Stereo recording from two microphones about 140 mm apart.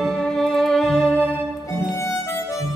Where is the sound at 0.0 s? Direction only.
5° left (ahead or behind).